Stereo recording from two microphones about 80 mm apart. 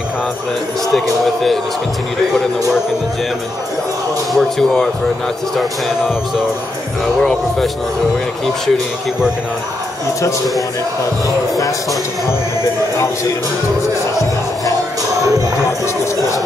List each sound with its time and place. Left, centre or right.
1.2 s speech: centre
4.3 s speech: centre
7.2 s speech: centre
11.2 s speech: left
14.1 s music: left